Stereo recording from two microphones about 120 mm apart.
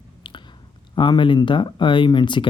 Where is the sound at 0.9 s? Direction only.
45° left (ahead or behind).